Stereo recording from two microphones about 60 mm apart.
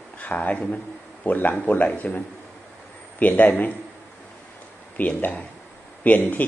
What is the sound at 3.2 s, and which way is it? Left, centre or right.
Speech, left.